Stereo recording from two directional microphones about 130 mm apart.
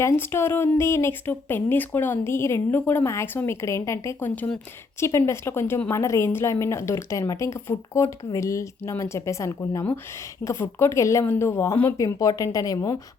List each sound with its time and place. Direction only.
0.0 s speech: 20° left (ahead or behind)